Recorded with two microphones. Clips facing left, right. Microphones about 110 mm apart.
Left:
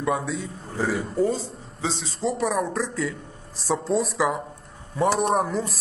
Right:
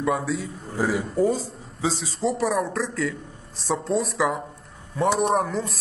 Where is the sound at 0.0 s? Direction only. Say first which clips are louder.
Right 1 dB; centre (ahead or behind).